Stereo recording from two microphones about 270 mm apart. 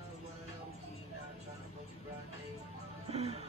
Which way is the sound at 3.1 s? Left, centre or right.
Right.